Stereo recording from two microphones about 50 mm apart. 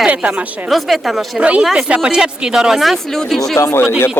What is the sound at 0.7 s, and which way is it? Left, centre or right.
Speech, centre.